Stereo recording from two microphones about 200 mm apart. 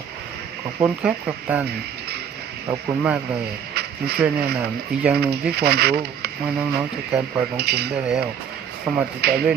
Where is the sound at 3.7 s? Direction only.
55° right (ahead or behind).